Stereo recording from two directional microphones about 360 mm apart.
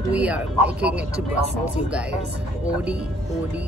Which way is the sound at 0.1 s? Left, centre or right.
Centre.